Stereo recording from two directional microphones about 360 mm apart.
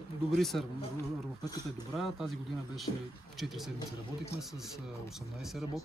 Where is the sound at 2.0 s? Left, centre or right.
Centre.